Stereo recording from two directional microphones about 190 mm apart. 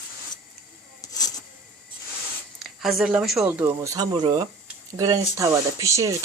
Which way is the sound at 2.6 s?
Centre (ahead or behind).